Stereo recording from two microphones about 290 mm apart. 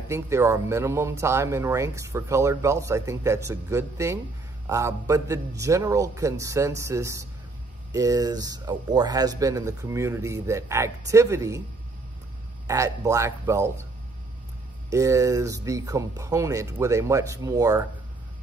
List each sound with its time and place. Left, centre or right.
0.1 s speech: centre
12.6 s speech: centre
14.9 s speech: centre